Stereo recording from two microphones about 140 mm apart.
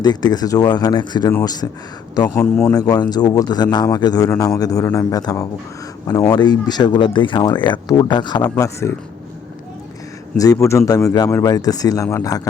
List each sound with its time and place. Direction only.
0.0 s a man's voice: 30° left (ahead or behind)
2.4 s a man's voice: 10° left (ahead or behind)
2.9 s a man's voice: 30° left (ahead or behind)
8.4 s a man's voice: 20° left (ahead or behind)
10.3 s a man's voice: 25° left (ahead or behind)